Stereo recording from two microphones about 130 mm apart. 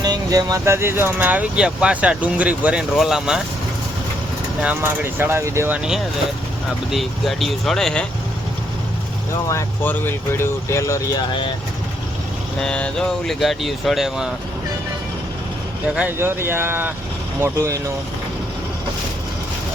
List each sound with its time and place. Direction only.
0.0 s speech: 30° right (ahead or behind); by 3.4 s 5° right (ahead or behind)
4.6 s speech: 15° right (ahead or behind); by 8.0 s 5° left (ahead or behind)
9.5 s speech: 25° left (ahead or behind)
12.5 s speech: 5° left (ahead or behind)
16.0 s speech: 15° right (ahead or behind)